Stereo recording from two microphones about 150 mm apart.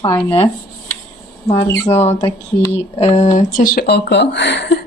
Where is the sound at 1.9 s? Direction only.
45° left (ahead or behind); by 4.0 s 85° left.